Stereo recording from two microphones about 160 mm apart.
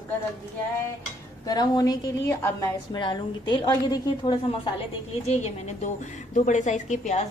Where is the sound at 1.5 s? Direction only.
25° left (ahead or behind).